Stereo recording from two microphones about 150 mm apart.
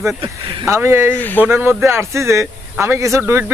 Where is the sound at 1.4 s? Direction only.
15° right (ahead or behind).